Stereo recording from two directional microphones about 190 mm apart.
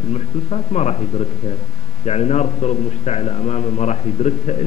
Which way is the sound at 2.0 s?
35° left (ahead or behind).